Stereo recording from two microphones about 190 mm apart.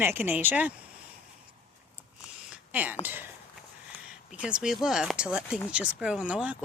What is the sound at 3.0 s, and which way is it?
Speech, 10° right (ahead or behind).